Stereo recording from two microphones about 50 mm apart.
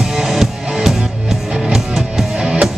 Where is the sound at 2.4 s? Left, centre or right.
Right.